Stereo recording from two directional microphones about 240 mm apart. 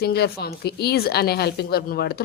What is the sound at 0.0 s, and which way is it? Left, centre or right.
A woman's voice, left.